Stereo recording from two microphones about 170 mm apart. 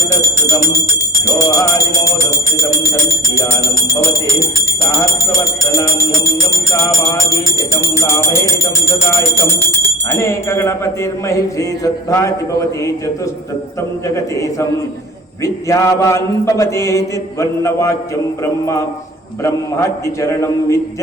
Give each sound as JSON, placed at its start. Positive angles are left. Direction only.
{"t": 2.6, "sound": "speech", "side_deg": 20}
{"t": 4.9, "sound": "music", "side_deg": 20}
{"t": 7.8, "sound": "speech", "side_deg": 15}
{"t": 9.6, "sound": "speech", "side_deg": 15}
{"t": 15.4, "sound": "speech", "side_deg": 20}